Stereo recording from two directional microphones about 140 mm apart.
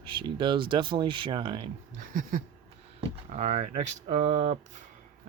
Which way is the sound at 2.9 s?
55° right (ahead or behind).